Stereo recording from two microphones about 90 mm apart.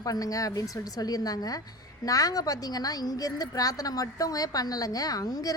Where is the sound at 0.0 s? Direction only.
40° left (ahead or behind).